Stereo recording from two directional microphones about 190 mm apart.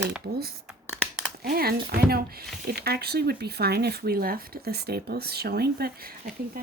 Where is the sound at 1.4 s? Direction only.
55° right (ahead or behind).